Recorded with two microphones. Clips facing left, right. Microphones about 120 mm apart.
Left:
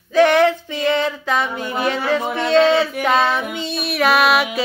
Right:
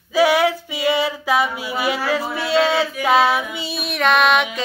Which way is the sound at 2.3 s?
5° right (ahead or behind).